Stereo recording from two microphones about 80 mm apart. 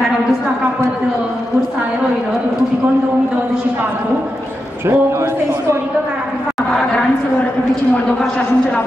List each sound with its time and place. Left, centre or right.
4.8 s speech: right